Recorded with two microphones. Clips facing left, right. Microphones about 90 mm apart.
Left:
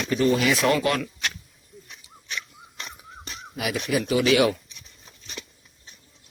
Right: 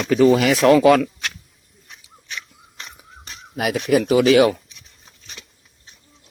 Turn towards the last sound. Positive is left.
turn(degrees=-55)  # may be behind; listen again after turning